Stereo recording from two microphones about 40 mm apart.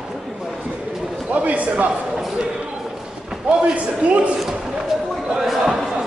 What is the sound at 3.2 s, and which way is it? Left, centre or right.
Speech, right.